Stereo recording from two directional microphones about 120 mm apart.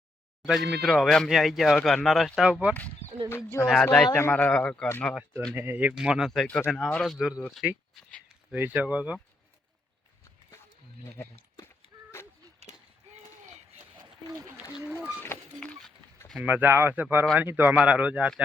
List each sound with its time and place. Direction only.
0.4 s speech: centre (ahead or behind)
2.5 s speech: 10° right (ahead or behind)
3.2 s speech: 20° left (ahead or behind)
5.5 s speech: 15° right (ahead or behind)
5.9 s speech: 5° right (ahead or behind)
14.0 s a sound: 35° right (ahead or behind)
14.8 s speech: 10° right (ahead or behind)
15.3 s a sound: 20° left (ahead or behind)
16.4 s speech: 15° right (ahead or behind)